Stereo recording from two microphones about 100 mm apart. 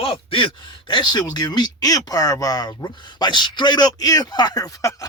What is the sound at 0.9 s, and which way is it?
Speech, 50° left (ahead or behind).